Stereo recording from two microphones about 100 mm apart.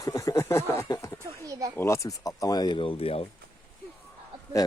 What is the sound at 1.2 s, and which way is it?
Speech, 35° right (ahead or behind).